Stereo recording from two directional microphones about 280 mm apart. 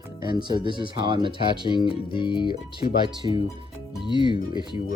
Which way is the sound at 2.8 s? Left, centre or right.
Centre.